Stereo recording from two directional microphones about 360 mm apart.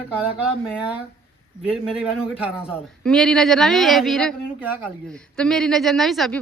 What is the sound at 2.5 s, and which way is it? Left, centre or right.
A woman's voice, centre.